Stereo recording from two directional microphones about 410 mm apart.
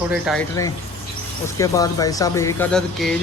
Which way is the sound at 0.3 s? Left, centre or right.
Centre.